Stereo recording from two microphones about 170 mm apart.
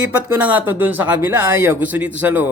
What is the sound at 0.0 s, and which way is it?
Speech, 10° right (ahead or behind).